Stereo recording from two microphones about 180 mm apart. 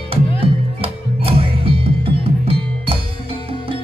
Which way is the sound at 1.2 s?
30° right (ahead or behind).